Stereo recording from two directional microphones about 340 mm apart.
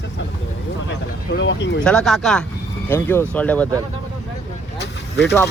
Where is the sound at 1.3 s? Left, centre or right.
Left.